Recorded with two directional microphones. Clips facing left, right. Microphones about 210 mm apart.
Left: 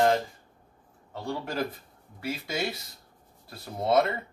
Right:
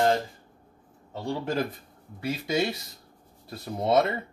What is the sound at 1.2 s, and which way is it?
Speech, 20° right (ahead or behind).